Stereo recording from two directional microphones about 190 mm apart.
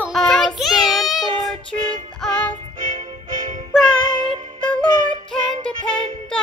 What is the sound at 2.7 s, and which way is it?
Music, 45° right (ahead or behind).